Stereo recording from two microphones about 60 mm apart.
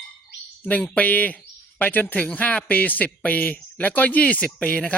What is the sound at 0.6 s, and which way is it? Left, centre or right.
Speech, left.